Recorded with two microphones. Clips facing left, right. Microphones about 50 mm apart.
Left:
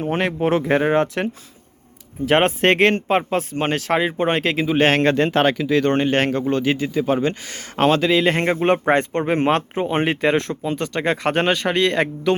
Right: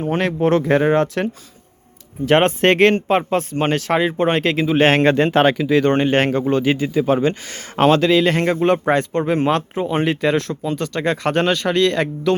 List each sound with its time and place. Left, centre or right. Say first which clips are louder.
0.1 s speech: right 3 dB; centre
4.8 s speech: right 2 dB; centre
8.1 s speech: right 2 dB; left